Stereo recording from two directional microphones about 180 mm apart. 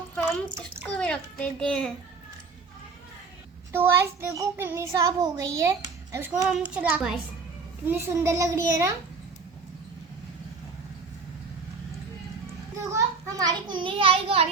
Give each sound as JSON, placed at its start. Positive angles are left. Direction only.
{"t": 0.9, "sound": "a child's voice", "side_deg": 5}
{"t": 3.7, "sound": "a child's voice", "side_deg": -15}
{"t": 12.8, "sound": "a child's voice", "side_deg": -15}